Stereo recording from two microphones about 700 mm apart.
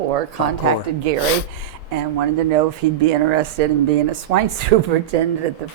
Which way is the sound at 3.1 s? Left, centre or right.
Right.